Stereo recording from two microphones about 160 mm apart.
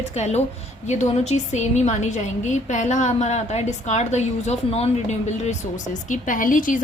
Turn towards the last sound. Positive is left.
turn(degrees=55)  # may be behind; listen again after turning